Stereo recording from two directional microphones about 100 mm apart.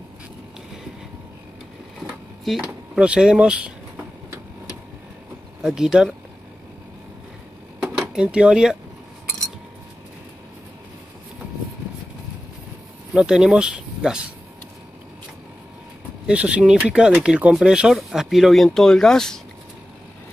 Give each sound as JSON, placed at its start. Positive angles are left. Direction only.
{"t": 2.6, "sound": "speech", "side_deg": -10}
{"t": 5.6, "sound": "speech", "side_deg": -5}
{"t": 8.0, "sound": "speech", "side_deg": -10}
{"t": 13.1, "sound": "speech", "side_deg": -5}
{"t": 16.3, "sound": "speech", "side_deg": -10}